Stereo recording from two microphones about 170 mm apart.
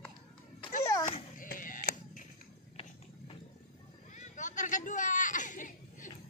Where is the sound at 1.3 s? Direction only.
55° left (ahead or behind).